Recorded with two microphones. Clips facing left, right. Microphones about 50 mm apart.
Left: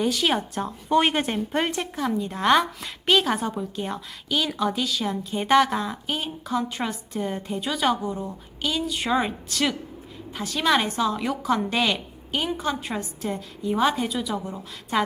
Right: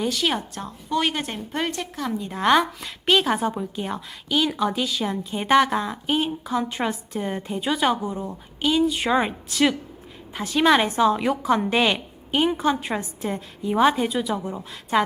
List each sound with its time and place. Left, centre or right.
0.0 s speech: centre
0.5 s speech: centre
1.8 s a woman's voice: centre